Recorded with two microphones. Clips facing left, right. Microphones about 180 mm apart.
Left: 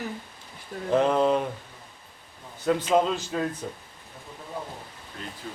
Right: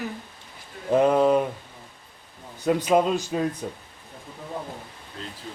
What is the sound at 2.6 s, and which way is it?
Speech, 15° right (ahead or behind).